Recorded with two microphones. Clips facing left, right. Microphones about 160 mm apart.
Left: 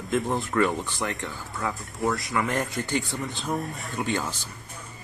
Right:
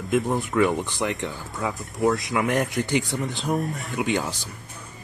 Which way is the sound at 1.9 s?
20° right (ahead or behind).